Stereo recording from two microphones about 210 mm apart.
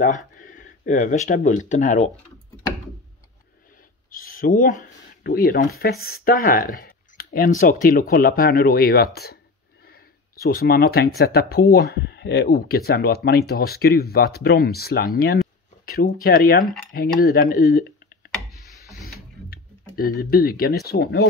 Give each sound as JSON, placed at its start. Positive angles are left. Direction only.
{"t": 0.4, "sound": "speech", "side_deg": 40}
{"t": 4.1, "sound": "speech", "side_deg": 40}
{"t": 19.0, "sound": "tick-tock", "side_deg": 45}